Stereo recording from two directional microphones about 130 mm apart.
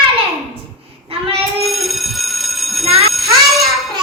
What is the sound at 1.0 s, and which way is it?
Child singing, 45° right (ahead or behind).